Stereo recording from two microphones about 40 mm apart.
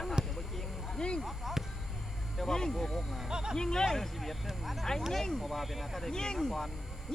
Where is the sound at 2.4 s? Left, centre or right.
Centre.